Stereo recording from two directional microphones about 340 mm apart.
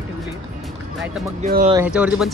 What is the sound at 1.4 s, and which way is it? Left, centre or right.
Speech, right.